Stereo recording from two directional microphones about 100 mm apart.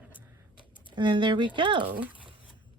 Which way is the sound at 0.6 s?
50° right (ahead or behind).